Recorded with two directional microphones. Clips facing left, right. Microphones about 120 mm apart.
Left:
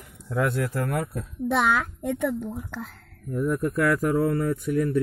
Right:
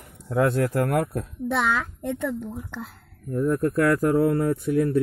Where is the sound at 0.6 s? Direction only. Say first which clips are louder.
Right 5 dB; 50° right (ahead or behind).